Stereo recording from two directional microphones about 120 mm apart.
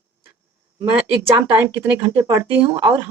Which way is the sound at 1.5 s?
15° right (ahead or behind).